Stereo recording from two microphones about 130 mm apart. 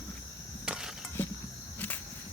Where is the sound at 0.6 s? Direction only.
5° right (ahead or behind).